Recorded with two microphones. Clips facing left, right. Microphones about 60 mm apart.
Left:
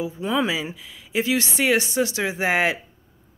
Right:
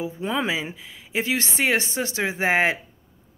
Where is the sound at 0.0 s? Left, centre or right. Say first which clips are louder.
Left 2 dB; right.